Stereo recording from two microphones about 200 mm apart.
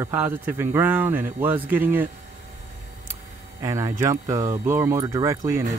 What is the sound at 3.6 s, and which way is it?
Speech, 15° right (ahead or behind).